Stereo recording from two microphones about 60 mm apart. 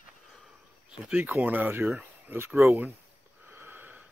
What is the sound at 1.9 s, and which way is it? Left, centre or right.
Speech, right.